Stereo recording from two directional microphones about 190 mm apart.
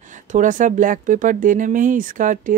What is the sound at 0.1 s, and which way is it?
Speech, 40° right (ahead or behind).